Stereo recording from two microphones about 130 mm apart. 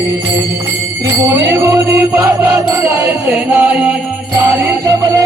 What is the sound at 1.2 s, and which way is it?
Music, 20° right (ahead or behind).